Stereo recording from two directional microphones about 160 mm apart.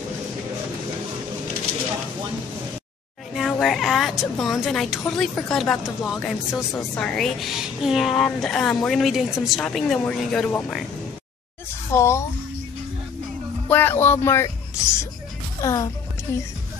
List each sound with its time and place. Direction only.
3.3 s a woman's voice: centre (ahead or behind)
11.9 s speech: 15° left (ahead or behind)
13.7 s speech: 10° left (ahead or behind)